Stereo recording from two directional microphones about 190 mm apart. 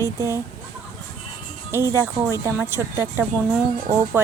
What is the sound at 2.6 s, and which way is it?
Speech, 10° right (ahead or behind).